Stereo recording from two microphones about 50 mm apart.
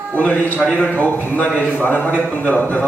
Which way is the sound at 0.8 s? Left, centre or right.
Left.